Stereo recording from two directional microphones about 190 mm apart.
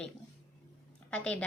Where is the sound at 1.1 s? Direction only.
5° left (ahead or behind).